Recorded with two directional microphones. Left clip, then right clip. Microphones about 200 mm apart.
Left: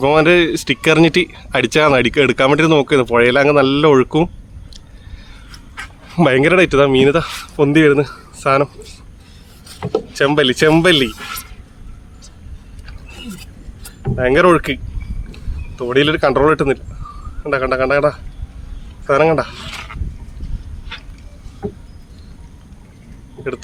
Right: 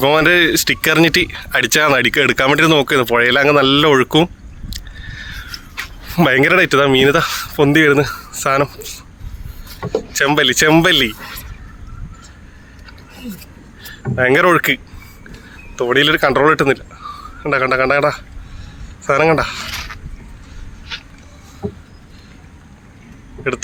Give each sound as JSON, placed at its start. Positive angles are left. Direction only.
{"t": 0.0, "sound": "speech", "side_deg": 0}
{"t": 5.1, "sound": "a sound", "side_deg": 0}
{"t": 6.1, "sound": "speech", "side_deg": 0}
{"t": 10.1, "sound": "speech", "side_deg": -15}
{"t": 14.2, "sound": "speech", "side_deg": -10}
{"t": 23.4, "sound": "speech", "side_deg": -20}